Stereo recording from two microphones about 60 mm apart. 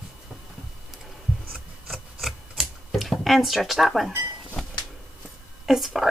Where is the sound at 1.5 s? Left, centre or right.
Centre.